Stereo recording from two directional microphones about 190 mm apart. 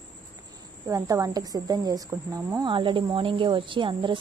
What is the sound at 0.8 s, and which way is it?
Speech, 15° right (ahead or behind).